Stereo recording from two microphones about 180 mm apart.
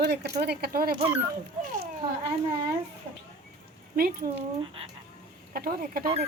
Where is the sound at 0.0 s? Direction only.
65° right (ahead or behind).